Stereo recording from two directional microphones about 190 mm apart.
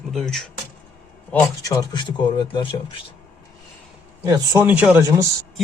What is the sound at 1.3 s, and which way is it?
Speech, 15° left (ahead or behind).